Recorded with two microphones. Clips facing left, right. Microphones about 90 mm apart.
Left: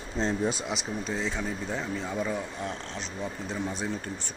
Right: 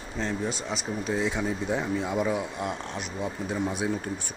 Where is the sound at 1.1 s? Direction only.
10° right (ahead or behind).